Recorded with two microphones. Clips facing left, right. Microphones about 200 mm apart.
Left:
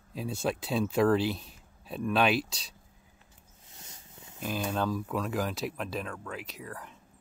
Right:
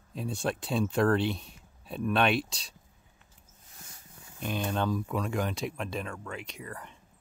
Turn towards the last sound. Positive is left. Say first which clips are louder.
# even
turn(degrees=0)  # may be behind; listen again after turning